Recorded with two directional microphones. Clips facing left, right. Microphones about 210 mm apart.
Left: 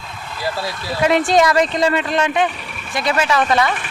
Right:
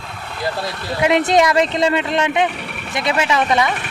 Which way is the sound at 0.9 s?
20° right (ahead or behind).